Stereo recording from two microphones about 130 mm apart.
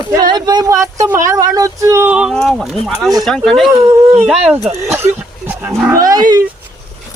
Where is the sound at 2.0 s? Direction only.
5° right (ahead or behind).